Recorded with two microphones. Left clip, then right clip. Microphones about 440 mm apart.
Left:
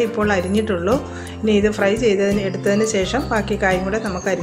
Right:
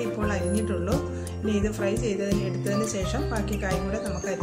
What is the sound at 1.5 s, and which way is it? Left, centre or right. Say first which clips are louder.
Speech: left 10 dB; left.